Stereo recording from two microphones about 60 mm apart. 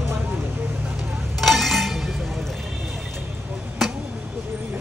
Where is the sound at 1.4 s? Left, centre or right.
Centre.